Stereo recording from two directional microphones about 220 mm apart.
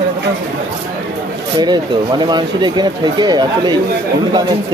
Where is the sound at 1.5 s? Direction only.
20° right (ahead or behind).